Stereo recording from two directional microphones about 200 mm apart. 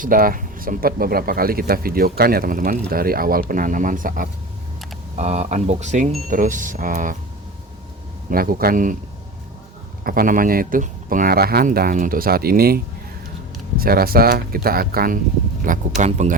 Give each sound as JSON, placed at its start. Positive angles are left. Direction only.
{"t": 0.0, "sound": "speech", "side_deg": -45}
{"t": 8.3, "sound": "speech", "side_deg": -45}
{"t": 10.0, "sound": "speech", "side_deg": -45}
{"t": 16.0, "sound": "speech", "side_deg": -35}